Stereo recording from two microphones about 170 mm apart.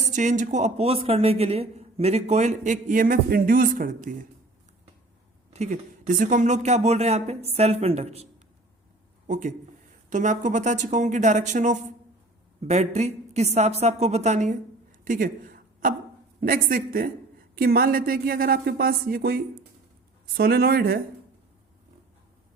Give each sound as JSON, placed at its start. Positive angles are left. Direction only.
{"t": 0.0, "sound": "speech", "side_deg": -45}
{"t": 5.5, "sound": "speech", "side_deg": -45}
{"t": 15.0, "sound": "a sound", "side_deg": -55}
{"t": 16.4, "sound": "speech", "side_deg": -55}